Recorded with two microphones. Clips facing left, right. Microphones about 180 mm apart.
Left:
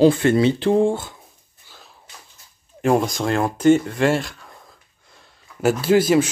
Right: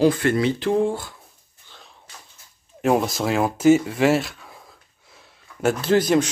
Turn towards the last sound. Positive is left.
turn(degrees=5)  # may be behind; listen again after turning